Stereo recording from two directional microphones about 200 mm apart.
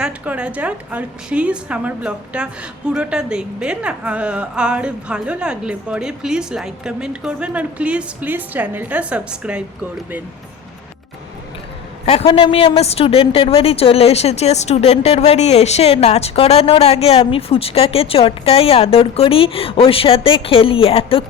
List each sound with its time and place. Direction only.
0.0 s a woman's voice: 5° right (ahead or behind)
12.0 s a woman's voice: 30° left (ahead or behind)